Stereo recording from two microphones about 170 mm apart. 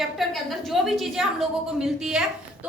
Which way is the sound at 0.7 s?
Centre (ahead or behind).